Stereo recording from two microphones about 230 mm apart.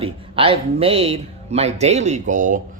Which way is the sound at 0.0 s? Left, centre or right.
Right.